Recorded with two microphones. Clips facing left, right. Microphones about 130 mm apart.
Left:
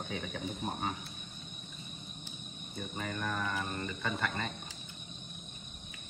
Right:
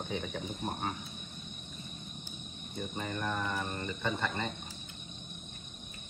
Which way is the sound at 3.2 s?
15° right (ahead or behind).